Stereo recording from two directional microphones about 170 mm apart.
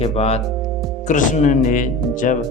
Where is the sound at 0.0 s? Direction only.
35° left (ahead or behind).